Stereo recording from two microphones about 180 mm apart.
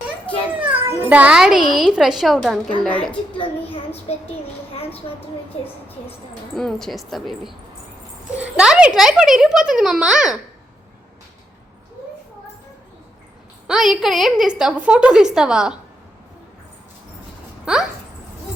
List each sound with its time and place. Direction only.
0.6 s a child's voice: 10° right (ahead or behind)
3.3 s a child's voice: 30° left (ahead or behind)
6.6 s a child's voice: centre (ahead or behind)
13.7 s a child's voice: centre (ahead or behind)
17.7 s speech: 5° right (ahead or behind)